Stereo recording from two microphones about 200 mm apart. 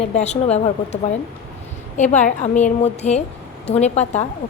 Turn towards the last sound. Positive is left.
turn(degrees=35)  # may be behind; listen again after turning